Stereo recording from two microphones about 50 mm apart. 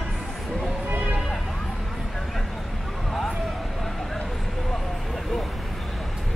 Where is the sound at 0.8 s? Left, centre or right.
Right.